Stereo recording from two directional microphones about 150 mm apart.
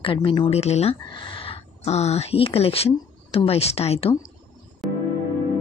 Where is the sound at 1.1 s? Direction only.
35° left (ahead or behind).